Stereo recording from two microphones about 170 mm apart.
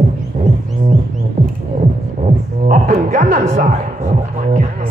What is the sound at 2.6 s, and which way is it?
Music, 50° right (ahead or behind).